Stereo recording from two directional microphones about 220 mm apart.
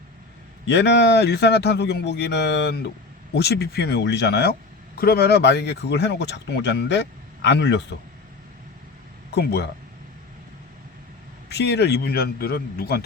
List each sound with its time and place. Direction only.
0.7 s speech: 50° left (ahead or behind)
9.3 s speech: 45° left (ahead or behind)
11.4 s speech: 50° left (ahead or behind)